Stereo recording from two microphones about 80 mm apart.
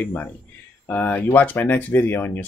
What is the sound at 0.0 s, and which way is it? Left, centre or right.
Speech, left.